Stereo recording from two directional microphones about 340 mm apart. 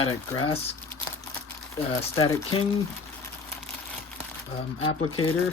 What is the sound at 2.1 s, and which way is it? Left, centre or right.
Speech, centre.